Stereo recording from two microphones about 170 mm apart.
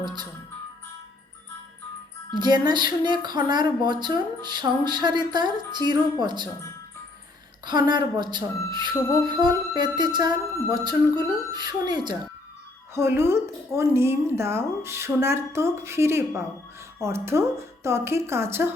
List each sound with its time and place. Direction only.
2.3 s speech: 25° right (ahead or behind)
7.6 s speech: 25° right (ahead or behind)
12.9 s speech: 15° right (ahead or behind)